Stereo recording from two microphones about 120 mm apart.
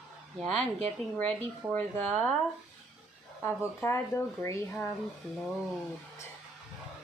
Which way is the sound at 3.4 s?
20° left (ahead or behind).